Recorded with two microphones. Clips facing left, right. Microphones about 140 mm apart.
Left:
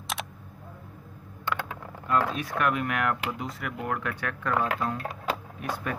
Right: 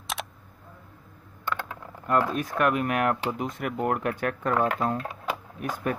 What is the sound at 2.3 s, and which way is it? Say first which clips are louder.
Speech: right 3 dB; 45° right (ahead or behind).